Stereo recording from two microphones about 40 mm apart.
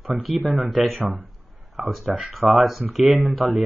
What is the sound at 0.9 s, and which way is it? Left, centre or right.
Speech, right.